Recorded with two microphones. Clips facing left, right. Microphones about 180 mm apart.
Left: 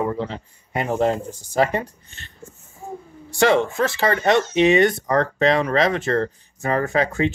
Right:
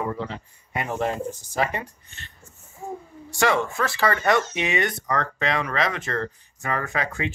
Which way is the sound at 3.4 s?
30° left (ahead or behind).